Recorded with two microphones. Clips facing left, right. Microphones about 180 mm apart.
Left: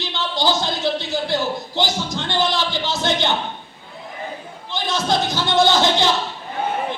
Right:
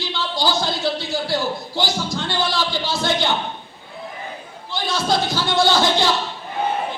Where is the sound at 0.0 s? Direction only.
20° left (ahead or behind).